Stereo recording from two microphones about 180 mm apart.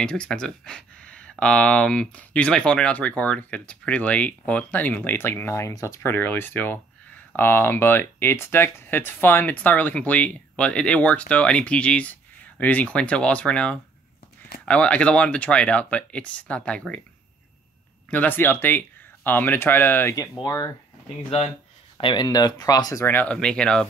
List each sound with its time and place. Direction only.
0.0 s speech: 5° left (ahead or behind)
18.1 s speech: 10° left (ahead or behind)
21.9 s speech: 25° left (ahead or behind); by 23.9 s 5° left (ahead or behind)